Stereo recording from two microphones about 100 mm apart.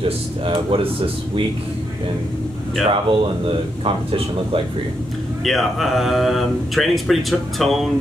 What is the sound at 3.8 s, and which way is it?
Speech, 70° right (ahead or behind).